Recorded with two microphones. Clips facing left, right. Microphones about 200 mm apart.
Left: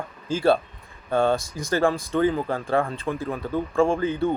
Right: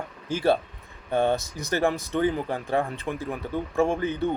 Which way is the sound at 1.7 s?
20° right (ahead or behind).